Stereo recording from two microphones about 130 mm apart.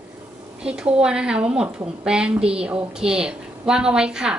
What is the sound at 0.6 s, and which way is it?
A woman's voice, 5° right (ahead or behind).